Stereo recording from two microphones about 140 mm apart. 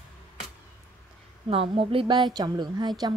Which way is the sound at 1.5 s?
40° right (ahead or behind).